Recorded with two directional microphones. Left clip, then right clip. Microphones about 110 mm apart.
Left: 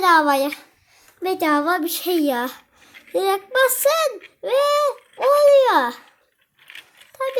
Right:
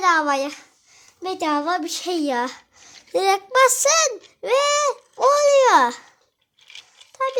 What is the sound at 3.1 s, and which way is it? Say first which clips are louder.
Speech: right 1 dB; 25° right (ahead or behind).